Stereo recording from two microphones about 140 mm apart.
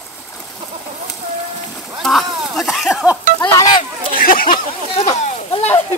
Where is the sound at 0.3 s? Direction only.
15° left (ahead or behind).